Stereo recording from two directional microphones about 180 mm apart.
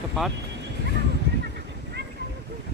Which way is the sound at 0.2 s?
Centre (ahead or behind).